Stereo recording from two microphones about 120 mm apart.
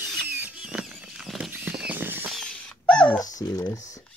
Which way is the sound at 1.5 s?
10° right (ahead or behind).